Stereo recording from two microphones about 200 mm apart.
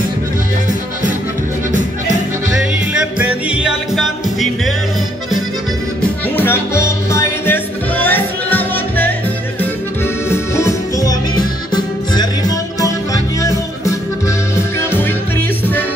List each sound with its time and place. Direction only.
2.9 s music: 5° right (ahead or behind)
6.3 s music: 10° left (ahead or behind)
10.3 s music: 15° left (ahead or behind)